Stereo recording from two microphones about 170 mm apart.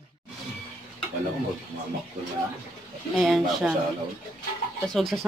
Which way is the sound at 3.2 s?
Centre (ahead or behind).